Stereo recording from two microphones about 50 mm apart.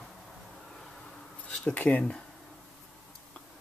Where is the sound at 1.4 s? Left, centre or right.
Left.